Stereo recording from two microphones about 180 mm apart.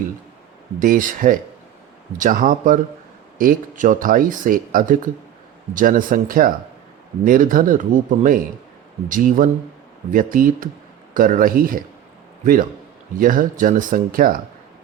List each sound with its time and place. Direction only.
0.8 s speech: 50° right (ahead or behind)
13.1 s speech: 50° right (ahead or behind)